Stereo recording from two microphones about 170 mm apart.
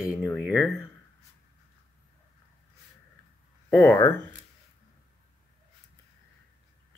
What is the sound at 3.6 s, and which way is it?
Speech, 10° left (ahead or behind).